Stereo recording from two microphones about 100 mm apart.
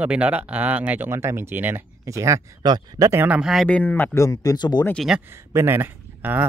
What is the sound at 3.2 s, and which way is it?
Speech, 10° right (ahead or behind).